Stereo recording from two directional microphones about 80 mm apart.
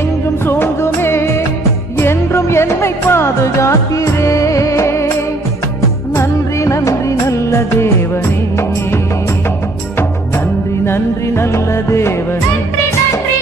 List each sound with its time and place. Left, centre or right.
0.5 s music: left
6.1 s music of bollywood: left
10.9 s music: left